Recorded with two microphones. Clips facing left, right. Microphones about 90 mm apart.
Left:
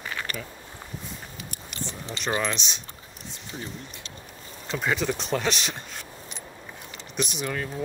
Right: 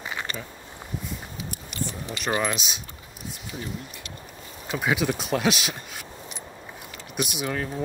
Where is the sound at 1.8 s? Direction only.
25° left (ahead or behind).